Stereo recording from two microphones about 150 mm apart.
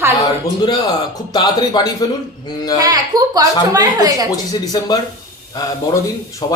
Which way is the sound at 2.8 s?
25° right (ahead or behind).